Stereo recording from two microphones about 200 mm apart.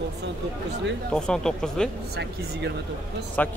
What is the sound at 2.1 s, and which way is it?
Speech, 55° right (ahead or behind).